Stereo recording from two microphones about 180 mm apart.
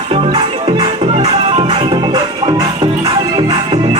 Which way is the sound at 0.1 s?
30° right (ahead or behind).